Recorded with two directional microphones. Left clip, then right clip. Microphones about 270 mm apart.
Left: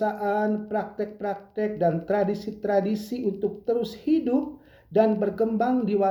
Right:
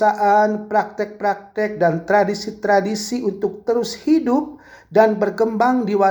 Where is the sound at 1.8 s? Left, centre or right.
Right.